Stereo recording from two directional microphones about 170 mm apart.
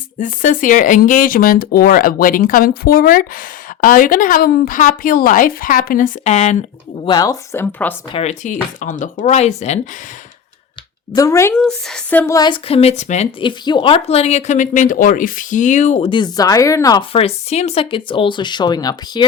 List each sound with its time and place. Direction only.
0.2 s speech: 50° left (ahead or behind)
6.2 s a woman's voice: 40° left (ahead or behind)
7.0 s speech: 25° left (ahead or behind)
8.1 s speech: 40° left (ahead or behind)
11.1 s speech: 20° left (ahead or behind)
11.5 s speech: 5° left (ahead or behind)
12.2 s a woman's voice: 20° left (ahead or behind); by 13.2 s 40° left (ahead or behind)
13.4 s speech: 30° left (ahead or behind)
16.0 s speech: 25° left (ahead or behind)
17.1 s speech: 35° left (ahead or behind)